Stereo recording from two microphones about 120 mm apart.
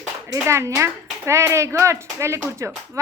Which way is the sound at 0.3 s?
25° right (ahead or behind).